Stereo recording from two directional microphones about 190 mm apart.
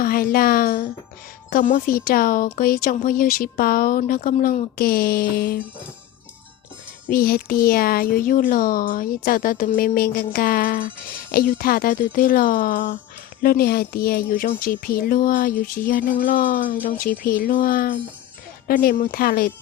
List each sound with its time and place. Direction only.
0.0 s speech: 50° left (ahead or behind)
7.1 s speech: 50° left (ahead or behind)